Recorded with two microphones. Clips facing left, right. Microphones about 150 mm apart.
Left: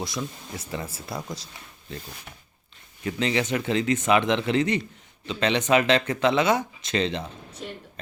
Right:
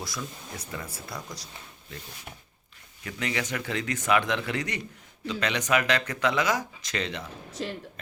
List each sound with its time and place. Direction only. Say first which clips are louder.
0.0 s speech: left 5 dB; 20° left (ahead or behind)
3.0 s speech: left 6 dB; 25° left (ahead or behind)
7.6 s speech: right 4 dB; 90° right